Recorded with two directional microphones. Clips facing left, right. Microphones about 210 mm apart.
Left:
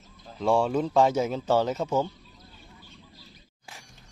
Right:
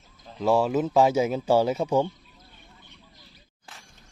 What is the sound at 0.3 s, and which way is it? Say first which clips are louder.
Speech: right 1 dB; centre (ahead or behind).